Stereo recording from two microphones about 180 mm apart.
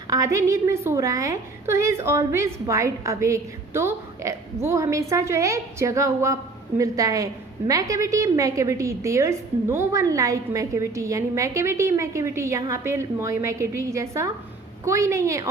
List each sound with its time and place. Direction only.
0.1 s a woman's voice: 15° right (ahead or behind)